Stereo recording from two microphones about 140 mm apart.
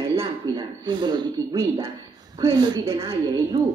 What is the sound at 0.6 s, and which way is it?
A woman's voice, 30° right (ahead or behind).